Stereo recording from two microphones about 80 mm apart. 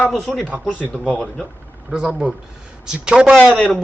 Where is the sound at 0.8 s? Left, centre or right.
Left.